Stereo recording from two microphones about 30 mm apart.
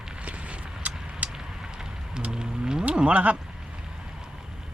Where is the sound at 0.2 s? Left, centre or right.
Right.